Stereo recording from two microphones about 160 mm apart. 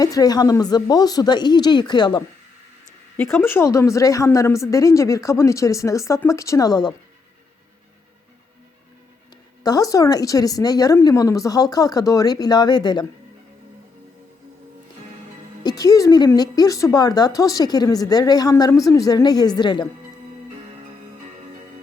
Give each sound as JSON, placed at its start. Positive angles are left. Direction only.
{"t": 0.0, "sound": "a woman's voice", "side_deg": 25}
{"t": 3.2, "sound": "a woman's voice", "side_deg": 15}
{"t": 9.6, "sound": "a woman's voice", "side_deg": 20}
{"t": 15.6, "sound": "a woman's voice", "side_deg": 25}